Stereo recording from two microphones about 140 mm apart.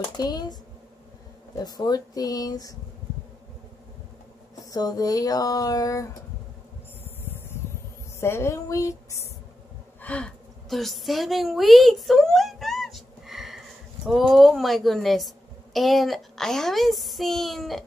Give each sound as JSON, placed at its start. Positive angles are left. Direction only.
{"t": 0.2, "sound": "speech", "side_deg": 30}
{"t": 1.6, "sound": "speech", "side_deg": 30}
{"t": 4.6, "sound": "speech", "side_deg": 25}
{"t": 8.2, "sound": "speech", "side_deg": 20}
{"t": 10.0, "sound": "a sound", "side_deg": 5}
{"t": 14.0, "sound": "a woman's voice", "side_deg": 0}